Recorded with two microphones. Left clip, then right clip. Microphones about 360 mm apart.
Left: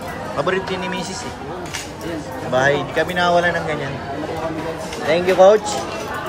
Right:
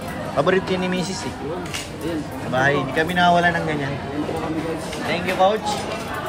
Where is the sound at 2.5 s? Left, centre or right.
Centre.